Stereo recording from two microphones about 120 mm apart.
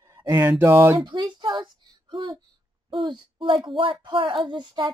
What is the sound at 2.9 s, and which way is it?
Speech, 45° right (ahead or behind).